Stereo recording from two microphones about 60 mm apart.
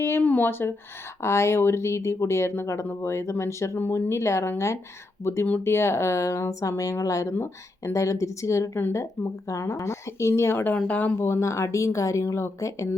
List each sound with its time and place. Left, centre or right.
0.2 s speech: left
1.2 s speech: left
3.8 s speech: left
7.3 s speech: left
7.9 s speech: left
10.8 s speech: left
11.2 s speech: left